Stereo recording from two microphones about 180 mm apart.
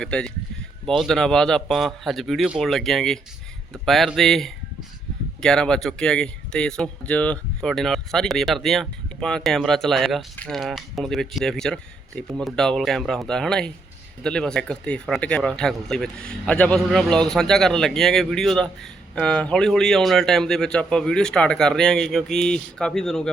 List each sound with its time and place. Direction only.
0.0 s speech: 5° left (ahead or behind)